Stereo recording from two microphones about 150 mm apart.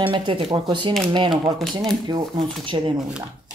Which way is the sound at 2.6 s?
35° right (ahead or behind).